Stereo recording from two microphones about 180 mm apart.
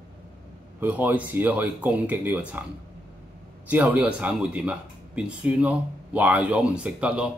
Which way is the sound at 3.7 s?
10° right (ahead or behind).